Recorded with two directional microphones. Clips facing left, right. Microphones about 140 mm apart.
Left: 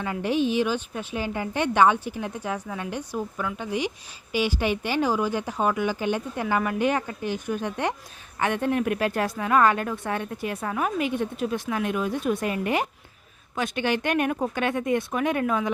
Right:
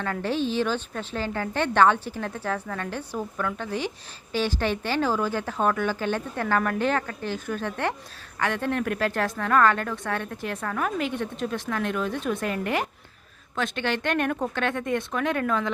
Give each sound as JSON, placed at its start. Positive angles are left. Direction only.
{"t": 0.0, "sound": "a woman's voice", "side_deg": 15}